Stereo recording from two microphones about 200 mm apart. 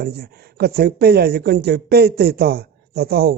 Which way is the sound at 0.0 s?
50° right (ahead or behind).